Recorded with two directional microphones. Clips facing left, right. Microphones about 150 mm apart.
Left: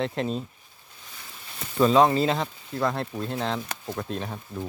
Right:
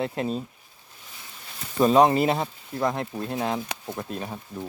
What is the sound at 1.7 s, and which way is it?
Speech, 15° right (ahead or behind).